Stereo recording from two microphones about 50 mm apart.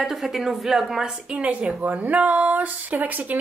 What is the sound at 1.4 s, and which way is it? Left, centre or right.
Speech, right.